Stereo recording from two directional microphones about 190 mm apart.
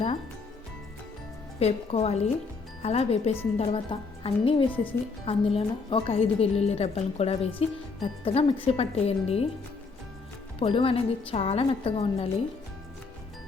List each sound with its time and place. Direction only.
1.5 s a woman's voice: 30° left (ahead or behind)
10.6 s speech: 30° left (ahead or behind)